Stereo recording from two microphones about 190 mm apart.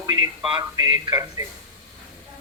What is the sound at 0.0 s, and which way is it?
Speech, 25° right (ahead or behind).